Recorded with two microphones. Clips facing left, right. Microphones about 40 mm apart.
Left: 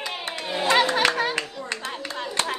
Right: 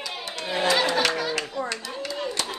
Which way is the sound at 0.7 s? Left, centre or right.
Left.